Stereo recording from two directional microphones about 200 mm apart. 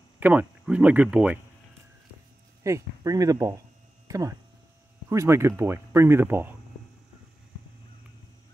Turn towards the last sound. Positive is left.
turn(degrees=-10)  # may be behind; listen again after turning